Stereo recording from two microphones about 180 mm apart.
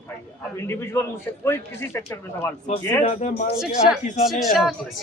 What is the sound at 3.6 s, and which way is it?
Speech, centre (ahead or behind).